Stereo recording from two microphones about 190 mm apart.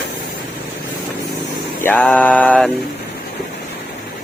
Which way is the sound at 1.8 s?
10° left (ahead or behind).